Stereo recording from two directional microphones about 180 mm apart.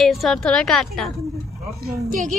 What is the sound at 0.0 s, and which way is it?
A woman's voice, centre (ahead or behind).